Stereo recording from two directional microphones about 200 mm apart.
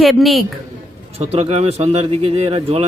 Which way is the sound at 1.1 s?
30° right (ahead or behind).